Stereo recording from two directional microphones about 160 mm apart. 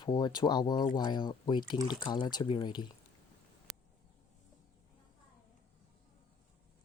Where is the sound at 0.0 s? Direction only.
25° left (ahead or behind).